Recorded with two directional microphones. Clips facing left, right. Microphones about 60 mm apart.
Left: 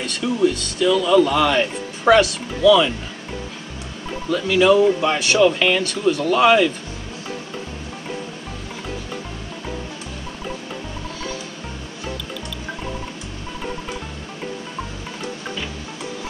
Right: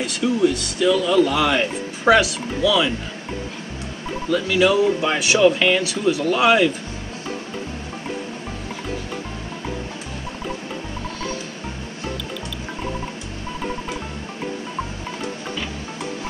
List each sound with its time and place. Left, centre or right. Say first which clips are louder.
0.0 s speech: even; centre
4.3 s speech: left 2 dB; centre